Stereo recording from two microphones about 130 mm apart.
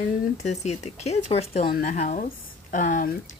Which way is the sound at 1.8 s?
70° left (ahead or behind).